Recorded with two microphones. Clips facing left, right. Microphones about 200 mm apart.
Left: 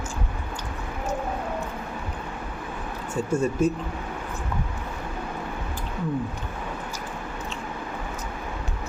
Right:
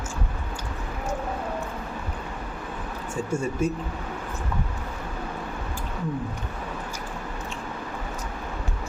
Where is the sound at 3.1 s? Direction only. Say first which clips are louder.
Left 4 dB; 10° right (ahead or behind).